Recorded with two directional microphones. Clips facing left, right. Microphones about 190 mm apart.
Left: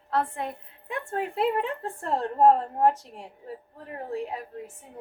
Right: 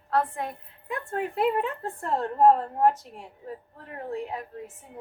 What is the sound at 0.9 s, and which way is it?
A woman's voice, 30° left (ahead or behind).